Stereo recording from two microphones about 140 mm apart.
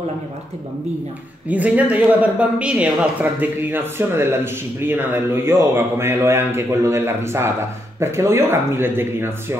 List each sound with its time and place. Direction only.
1.5 s speech: 10° right (ahead or behind)